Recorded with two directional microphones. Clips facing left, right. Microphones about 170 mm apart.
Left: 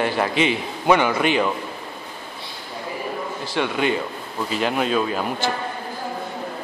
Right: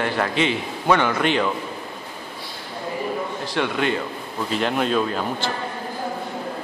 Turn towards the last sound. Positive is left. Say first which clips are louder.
# left 1 dB
turn(degrees=5)  # may be behind; listen again after turning